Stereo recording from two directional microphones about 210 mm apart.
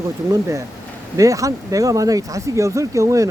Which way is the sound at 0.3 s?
15° right (ahead or behind).